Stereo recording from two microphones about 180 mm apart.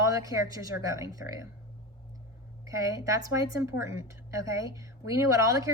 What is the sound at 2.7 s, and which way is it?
A woman's voice, 20° right (ahead or behind).